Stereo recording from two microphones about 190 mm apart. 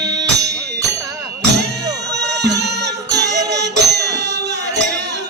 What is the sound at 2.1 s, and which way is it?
Music, 65° right (ahead or behind).